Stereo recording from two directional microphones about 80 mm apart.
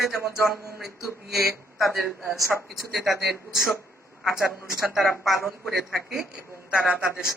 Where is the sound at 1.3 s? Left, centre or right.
Centre.